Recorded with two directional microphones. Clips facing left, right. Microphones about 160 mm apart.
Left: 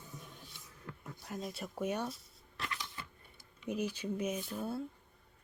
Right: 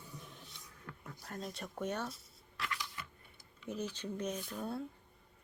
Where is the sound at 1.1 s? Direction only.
10° left (ahead or behind).